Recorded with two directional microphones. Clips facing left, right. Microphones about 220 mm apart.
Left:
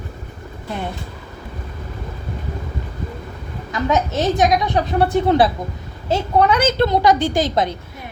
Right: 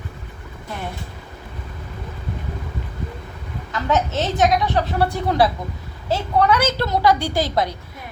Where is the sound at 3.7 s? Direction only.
15° left (ahead or behind).